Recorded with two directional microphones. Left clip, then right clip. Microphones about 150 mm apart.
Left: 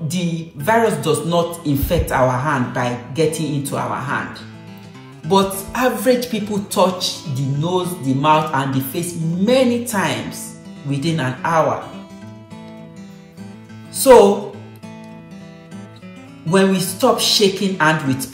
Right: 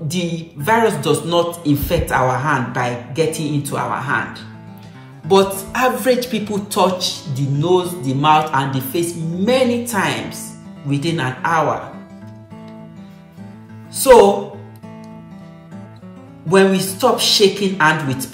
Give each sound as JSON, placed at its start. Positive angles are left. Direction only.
{"t": 0.1, "sound": "a man's voice", "side_deg": -5}
{"t": 16.4, "sound": "a man's voice", "side_deg": -10}